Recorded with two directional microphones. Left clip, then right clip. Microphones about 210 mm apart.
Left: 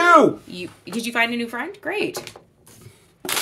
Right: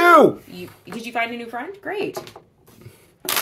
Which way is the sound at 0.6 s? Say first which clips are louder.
Left 4 dB; 40° left (ahead or behind).